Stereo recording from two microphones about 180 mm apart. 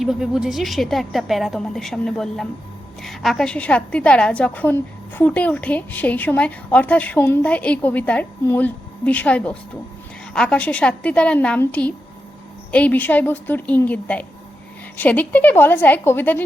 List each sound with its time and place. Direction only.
0.0 s a woman's voice: 5° right (ahead or behind)